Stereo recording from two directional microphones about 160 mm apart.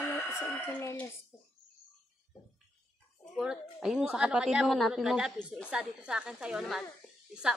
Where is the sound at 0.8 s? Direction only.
15° left (ahead or behind).